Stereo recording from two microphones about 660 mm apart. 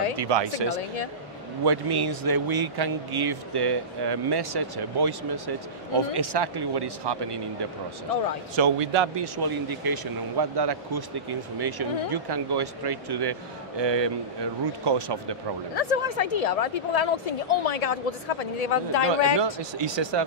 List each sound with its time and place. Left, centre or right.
0.2 s speech: right
8.5 s speech: right
15.7 s a woman's voice: left
19.3 s speech: right